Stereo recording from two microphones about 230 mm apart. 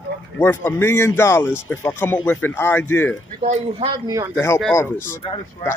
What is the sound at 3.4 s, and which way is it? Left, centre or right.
Speech, right.